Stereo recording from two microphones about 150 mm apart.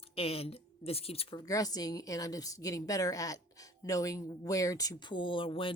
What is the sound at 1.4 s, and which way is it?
Speech, 25° left (ahead or behind).